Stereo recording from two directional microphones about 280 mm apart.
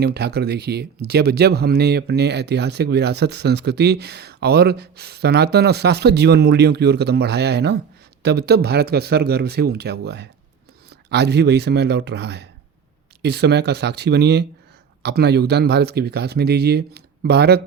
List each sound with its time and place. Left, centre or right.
0.0 s speech: right